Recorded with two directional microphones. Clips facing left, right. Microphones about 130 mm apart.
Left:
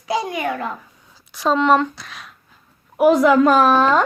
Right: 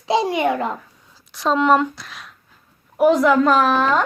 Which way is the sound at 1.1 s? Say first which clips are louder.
Left 1 dB; centre (ahead or behind).